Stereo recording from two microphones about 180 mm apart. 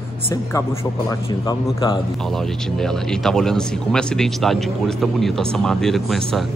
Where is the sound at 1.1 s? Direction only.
25° left (ahead or behind).